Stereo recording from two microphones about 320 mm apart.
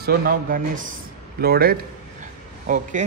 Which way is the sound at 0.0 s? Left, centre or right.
Right.